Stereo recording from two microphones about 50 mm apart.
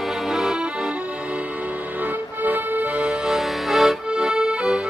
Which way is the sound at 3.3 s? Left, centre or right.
Centre.